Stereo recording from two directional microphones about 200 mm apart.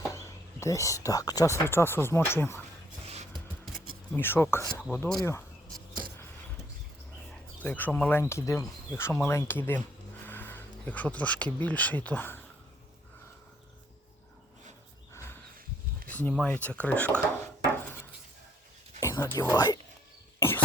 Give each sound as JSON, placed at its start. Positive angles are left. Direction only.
{"t": 0.0, "sound": "speech", "side_deg": 15}
{"t": 4.1, "sound": "speech", "side_deg": 10}
{"t": 7.3, "sound": "speech", "side_deg": 5}
{"t": 16.0, "sound": "speech", "side_deg": 10}
{"t": 18.9, "sound": "a sound", "side_deg": 15}
{"t": 19.4, "sound": "speech", "side_deg": 15}